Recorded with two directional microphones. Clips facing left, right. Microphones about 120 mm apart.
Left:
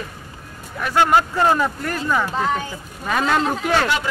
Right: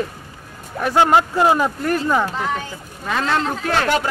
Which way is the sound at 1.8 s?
25° right (ahead or behind).